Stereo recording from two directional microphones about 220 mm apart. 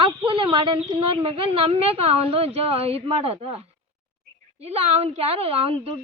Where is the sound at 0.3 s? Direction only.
25° right (ahead or behind).